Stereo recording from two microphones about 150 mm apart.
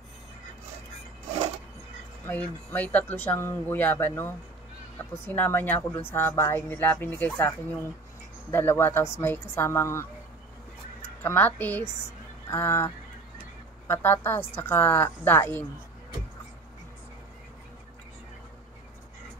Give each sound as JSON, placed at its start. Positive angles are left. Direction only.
{"t": 2.2, "sound": "speech", "side_deg": 10}
{"t": 11.2, "sound": "speech", "side_deg": 10}